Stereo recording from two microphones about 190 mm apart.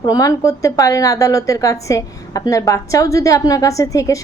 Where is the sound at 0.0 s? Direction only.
20° left (ahead or behind).